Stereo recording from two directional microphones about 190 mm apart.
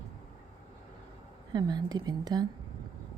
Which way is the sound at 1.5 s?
20° right (ahead or behind).